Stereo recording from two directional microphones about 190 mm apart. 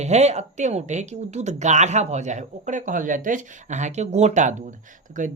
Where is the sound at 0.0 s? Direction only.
35° right (ahead or behind).